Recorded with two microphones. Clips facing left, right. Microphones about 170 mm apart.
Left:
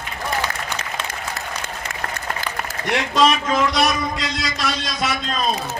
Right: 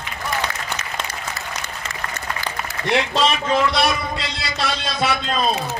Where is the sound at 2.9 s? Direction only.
30° right (ahead or behind).